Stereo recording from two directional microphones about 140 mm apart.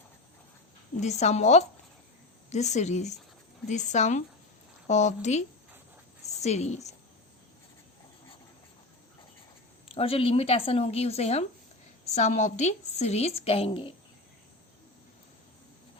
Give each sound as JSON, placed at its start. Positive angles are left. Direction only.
{"t": 0.9, "sound": "a woman's voice", "side_deg": 55}
{"t": 9.9, "sound": "a woman's voice", "side_deg": 45}